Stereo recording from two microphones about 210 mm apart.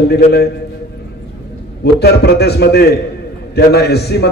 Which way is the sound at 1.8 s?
50° left (ahead or behind).